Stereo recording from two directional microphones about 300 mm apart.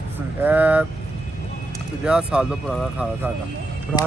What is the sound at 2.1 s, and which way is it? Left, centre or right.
Speech, centre.